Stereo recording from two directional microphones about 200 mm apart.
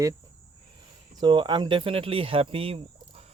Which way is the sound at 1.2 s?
20° right (ahead or behind).